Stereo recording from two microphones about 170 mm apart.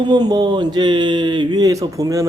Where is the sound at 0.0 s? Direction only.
25° right (ahead or behind).